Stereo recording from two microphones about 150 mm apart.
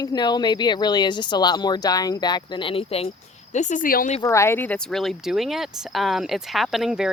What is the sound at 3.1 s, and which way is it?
Speech, 55° left (ahead or behind).